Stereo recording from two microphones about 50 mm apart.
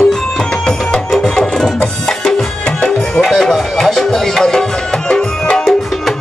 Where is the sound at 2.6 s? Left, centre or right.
Centre.